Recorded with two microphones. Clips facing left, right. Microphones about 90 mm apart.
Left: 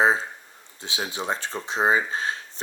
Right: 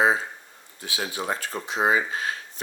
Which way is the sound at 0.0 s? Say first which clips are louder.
Left 1 dB; 30° left (ahead or behind).